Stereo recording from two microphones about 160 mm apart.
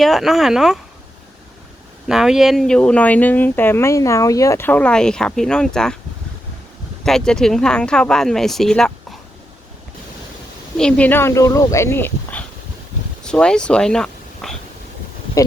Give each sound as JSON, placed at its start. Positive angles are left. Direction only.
{"t": 0.0, "sound": "speech", "side_deg": 0}
{"t": 2.0, "sound": "speech", "side_deg": -5}
{"t": 7.0, "sound": "speech", "side_deg": 5}
{"t": 10.8, "sound": "speech", "side_deg": 5}
{"t": 15.4, "sound": "speech", "side_deg": 20}